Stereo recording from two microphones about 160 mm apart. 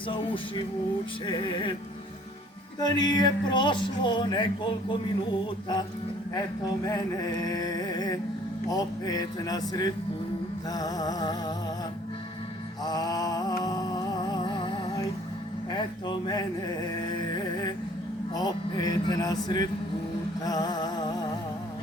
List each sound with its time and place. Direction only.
0.1 s music: 30° left (ahead or behind)
1.3 s speech: 30° left (ahead or behind)
2.8 s speech: 25° left (ahead or behind)
6.8 s speech: 25° left (ahead or behind)
12.8 s mantra: 25° left (ahead or behind)
15.7 s speech: 30° left (ahead or behind)
16.9 s a sound: 25° left (ahead or behind)
18.3 s speech: 25° left (ahead or behind)
20.4 s music: 25° left (ahead or behind)